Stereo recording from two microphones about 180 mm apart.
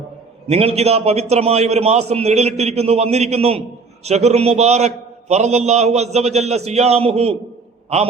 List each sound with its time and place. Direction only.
0.4 s a man's voice: 35° right (ahead or behind)